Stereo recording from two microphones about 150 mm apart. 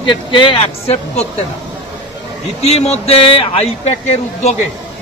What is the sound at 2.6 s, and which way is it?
Speech, 45° left (ahead or behind).